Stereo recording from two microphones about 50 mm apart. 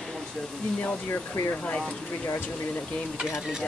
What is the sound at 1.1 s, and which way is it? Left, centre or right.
Speech, left.